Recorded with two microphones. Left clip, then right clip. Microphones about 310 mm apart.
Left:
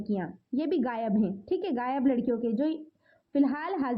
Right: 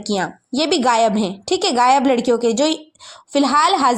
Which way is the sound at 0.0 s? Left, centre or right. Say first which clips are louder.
Right 13 dB; right.